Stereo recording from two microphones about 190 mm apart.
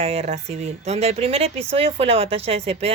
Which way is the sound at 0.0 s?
30° right (ahead or behind).